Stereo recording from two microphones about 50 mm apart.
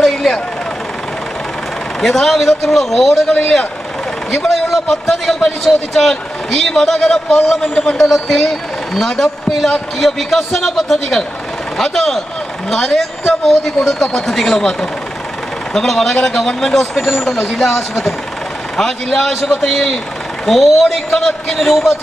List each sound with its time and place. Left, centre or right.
0.0 s vehicle: centre
2.0 s a man's voice: centre
7.7 s a man's voice: centre
8.1 s speech: centre
14.0 s a man's voice: centre